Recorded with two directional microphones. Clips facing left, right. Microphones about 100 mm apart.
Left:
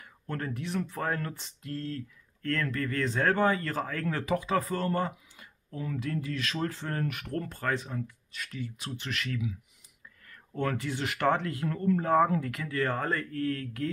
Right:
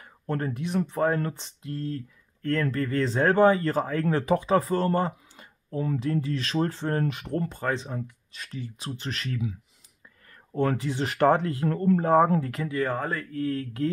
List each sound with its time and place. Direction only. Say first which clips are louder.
0.0 s speech: right 6 dB; 30° right (ahead or behind)
12.6 s speech: right 2 dB; 15° right (ahead or behind)
13.4 s speech: right 3 dB; 20° right (ahead or behind)